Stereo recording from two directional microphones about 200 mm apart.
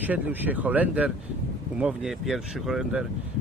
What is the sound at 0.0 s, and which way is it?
Speech, 10° right (ahead or behind).